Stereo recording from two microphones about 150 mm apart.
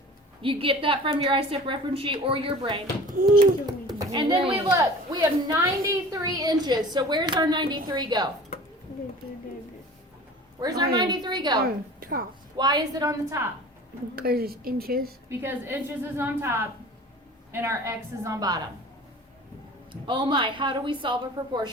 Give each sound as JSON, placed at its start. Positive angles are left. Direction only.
{"t": 0.4, "sound": "a woman's voice", "side_deg": -35}
{"t": 3.1, "sound": "speech", "side_deg": -65}
{"t": 3.7, "sound": "speech", "side_deg": -25}
{"t": 5.5, "sound": "a woman's voice", "side_deg": -25}
{"t": 10.6, "sound": "a woman's voice", "side_deg": -25}
{"t": 11.6, "sound": "a woman's voice", "side_deg": -75}
{"t": 12.5, "sound": "a woman's voice", "side_deg": -25}
{"t": 14.2, "sound": "speech", "side_deg": -85}
{"t": 15.3, "sound": "a woman's voice", "side_deg": -15}
{"t": 19.9, "sound": "a woman's voice", "side_deg": -35}